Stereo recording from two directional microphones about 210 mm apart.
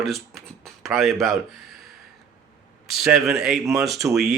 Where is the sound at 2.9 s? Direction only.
Centre (ahead or behind).